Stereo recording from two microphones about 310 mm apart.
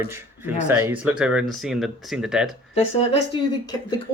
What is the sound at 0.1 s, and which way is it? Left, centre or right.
Speech, centre.